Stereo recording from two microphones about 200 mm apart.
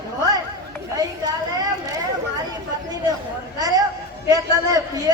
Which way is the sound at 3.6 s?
20° right (ahead or behind).